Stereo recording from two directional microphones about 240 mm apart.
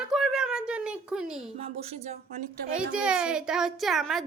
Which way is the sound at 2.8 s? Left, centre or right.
Centre.